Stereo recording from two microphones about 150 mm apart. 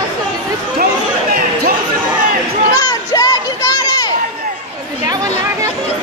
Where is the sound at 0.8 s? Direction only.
85° right.